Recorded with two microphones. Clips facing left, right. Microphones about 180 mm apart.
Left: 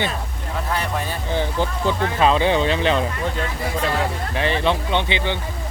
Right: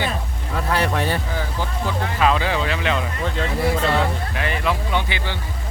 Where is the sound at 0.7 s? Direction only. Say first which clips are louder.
Right 5 dB; 75° right (ahead or behind).